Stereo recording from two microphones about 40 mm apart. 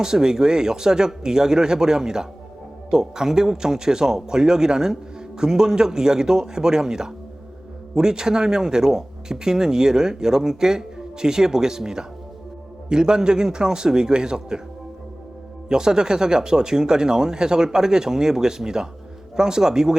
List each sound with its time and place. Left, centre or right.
0.0 s a man's voice: centre
15.7 s speech: centre